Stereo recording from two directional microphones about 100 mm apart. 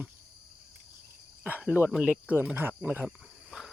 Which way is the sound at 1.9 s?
5° right (ahead or behind).